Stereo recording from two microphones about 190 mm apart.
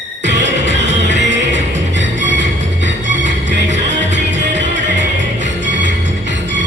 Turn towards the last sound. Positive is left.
turn(degrees=-70)  # may be behind; listen again after turning